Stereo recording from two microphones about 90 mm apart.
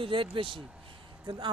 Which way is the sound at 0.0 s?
75° right (ahead or behind).